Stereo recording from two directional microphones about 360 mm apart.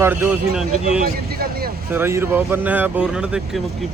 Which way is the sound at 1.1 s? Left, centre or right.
Right.